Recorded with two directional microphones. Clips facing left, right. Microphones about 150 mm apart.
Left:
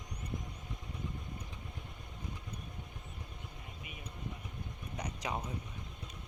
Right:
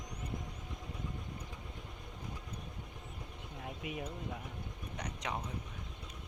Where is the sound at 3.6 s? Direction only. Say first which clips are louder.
Right 13 dB; 90° right.